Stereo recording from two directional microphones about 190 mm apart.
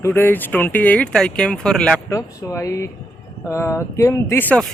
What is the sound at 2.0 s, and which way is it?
Speech, 15° left (ahead or behind).